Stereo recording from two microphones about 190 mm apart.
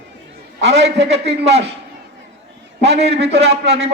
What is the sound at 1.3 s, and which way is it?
Speech, 35° right (ahead or behind).